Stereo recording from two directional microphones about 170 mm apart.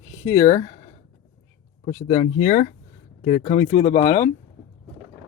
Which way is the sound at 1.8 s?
35° left (ahead or behind).